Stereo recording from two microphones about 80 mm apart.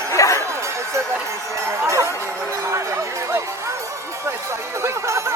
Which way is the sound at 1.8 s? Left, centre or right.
Right.